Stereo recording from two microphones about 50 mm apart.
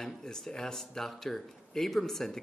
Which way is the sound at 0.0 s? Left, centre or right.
Centre.